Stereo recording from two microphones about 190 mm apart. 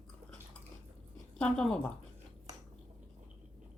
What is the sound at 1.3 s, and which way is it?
Speech, 5° left (ahead or behind).